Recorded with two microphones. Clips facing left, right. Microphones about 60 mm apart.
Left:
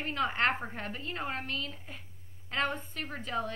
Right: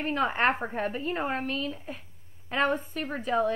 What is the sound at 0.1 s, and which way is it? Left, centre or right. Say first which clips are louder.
A woman's voice: right 4 dB; centre.